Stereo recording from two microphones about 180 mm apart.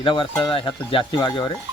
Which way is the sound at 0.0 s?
25° left (ahead or behind).